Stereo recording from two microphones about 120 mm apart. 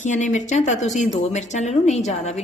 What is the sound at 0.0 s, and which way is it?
A woman's voice, 90° left.